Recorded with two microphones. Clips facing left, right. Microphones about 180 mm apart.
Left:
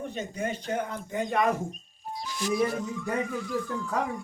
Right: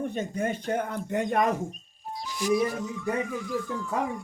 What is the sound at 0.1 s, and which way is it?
Speech, 50° right (ahead or behind).